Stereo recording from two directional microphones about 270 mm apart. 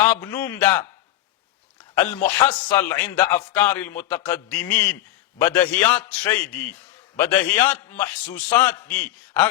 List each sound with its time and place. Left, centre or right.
0.0 s a man's voice: centre
2.2 s a man's voice: centre